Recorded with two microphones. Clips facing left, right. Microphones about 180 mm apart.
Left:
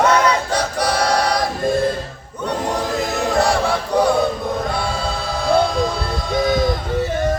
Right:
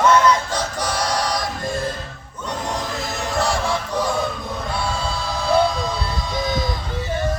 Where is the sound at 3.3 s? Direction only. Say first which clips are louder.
Left 3 dB; 65° left (ahead or behind).